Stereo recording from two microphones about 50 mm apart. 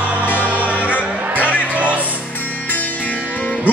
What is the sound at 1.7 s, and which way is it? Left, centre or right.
Music, right.